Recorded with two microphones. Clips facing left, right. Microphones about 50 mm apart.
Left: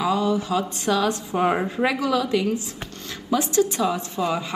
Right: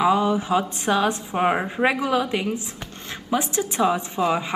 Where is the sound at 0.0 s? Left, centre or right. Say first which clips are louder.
Right 2 dB; right.